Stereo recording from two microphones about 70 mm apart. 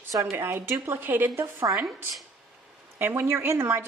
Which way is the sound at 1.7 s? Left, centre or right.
Right.